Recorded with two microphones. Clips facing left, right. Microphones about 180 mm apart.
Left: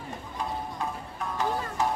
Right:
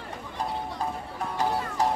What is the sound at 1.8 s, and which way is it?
Music, 35° right (ahead or behind).